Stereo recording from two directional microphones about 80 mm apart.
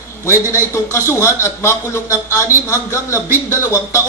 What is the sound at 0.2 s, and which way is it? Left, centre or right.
A man's voice, left.